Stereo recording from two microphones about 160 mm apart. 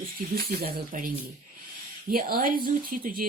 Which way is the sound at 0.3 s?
75° right (ahead or behind).